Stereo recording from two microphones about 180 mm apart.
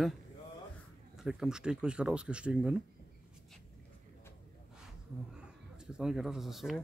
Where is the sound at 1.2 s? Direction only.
5° right (ahead or behind).